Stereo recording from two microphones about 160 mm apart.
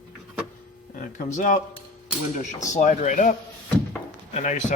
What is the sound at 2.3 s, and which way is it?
A man's voice, 50° left (ahead or behind).